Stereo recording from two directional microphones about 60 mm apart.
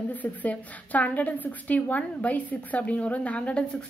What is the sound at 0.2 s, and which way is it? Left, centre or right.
A woman's voice, left.